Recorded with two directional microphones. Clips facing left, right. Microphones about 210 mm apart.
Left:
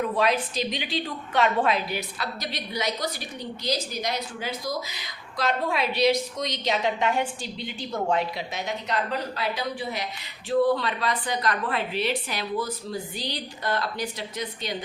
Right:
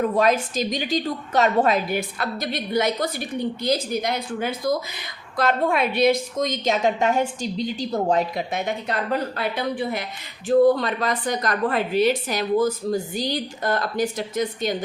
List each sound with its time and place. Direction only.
0.0 s a woman's voice: 45° right (ahead or behind)